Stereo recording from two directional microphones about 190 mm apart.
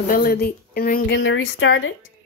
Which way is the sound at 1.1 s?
75° left (ahead or behind).